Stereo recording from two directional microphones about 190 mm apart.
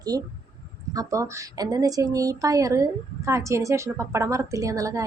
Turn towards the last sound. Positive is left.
turn(degrees=-15)  # may be behind; listen again after turning